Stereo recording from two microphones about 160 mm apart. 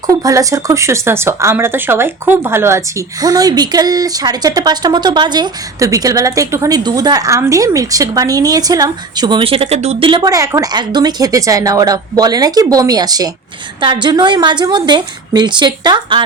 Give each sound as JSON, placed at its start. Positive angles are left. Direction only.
{"t": 0.1, "sound": "speech", "side_deg": -20}